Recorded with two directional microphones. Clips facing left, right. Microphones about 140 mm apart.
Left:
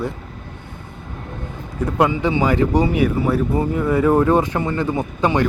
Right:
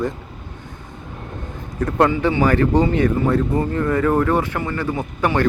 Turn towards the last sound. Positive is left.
turn(degrees=15)  # may be behind; listen again after turning